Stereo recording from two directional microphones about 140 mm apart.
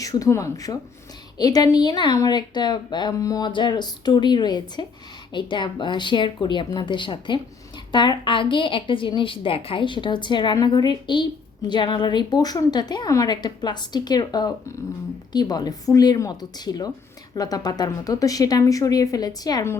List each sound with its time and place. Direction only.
0.0 s a woman's voice: 25° left (ahead or behind)